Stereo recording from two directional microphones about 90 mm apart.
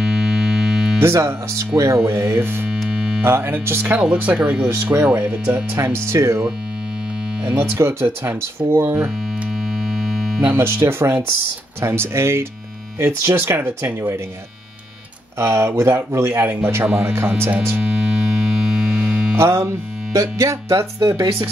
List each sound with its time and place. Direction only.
0.0 s music: 5° right (ahead or behind)
0.9 s speech: 30° right (ahead or behind)
2.9 s music: 15° right (ahead or behind)
3.3 s speech: 25° right (ahead or behind); by 4.6 s 10° right (ahead or behind)
4.6 s speech: 30° right (ahead or behind); by 5.6 s 15° right (ahead or behind)
5.8 s music: 30° right (ahead or behind)
7.4 s speech: 15° right (ahead or behind)
9.8 s a sound: 5° right (ahead or behind)
10.4 s speech: 30° right (ahead or behind)
15.3 s speech: 30° right (ahead or behind)
17.7 s music: 10° right (ahead or behind)
19.3 s music: 30° right (ahead or behind)